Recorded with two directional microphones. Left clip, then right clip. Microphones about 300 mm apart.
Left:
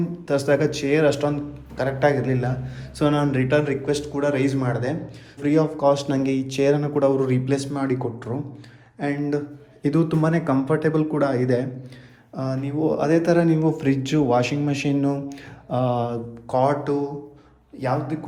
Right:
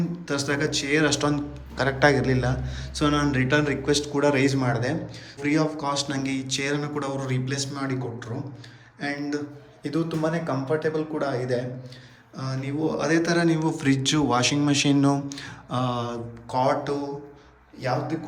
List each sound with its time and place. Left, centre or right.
0.3 s a man's voice: centre
12.4 s a man's voice: centre